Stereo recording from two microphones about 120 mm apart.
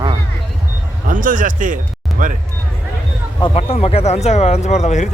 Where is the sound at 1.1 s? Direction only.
90° right.